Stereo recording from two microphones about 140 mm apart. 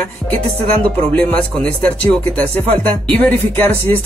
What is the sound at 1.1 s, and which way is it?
Speech, 10° left (ahead or behind).